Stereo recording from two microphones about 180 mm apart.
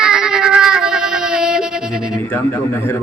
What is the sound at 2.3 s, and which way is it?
Speech, 10° left (ahead or behind).